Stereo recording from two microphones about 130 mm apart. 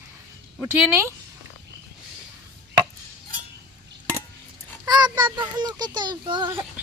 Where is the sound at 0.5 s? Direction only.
15° right (ahead or behind).